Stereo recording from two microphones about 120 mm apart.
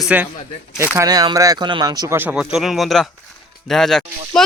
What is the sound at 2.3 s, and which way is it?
Speech, 5° right (ahead or behind).